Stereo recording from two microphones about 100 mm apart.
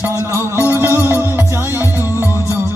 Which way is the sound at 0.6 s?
25° right (ahead or behind).